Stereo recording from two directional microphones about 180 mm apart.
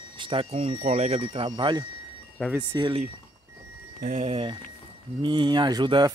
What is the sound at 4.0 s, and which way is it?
Speech, 40° right (ahead or behind).